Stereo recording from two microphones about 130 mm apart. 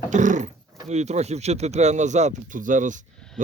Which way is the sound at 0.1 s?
70° right (ahead or behind).